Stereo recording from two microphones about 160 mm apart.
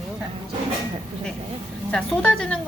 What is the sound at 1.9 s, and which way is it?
Speech, 5° left (ahead or behind).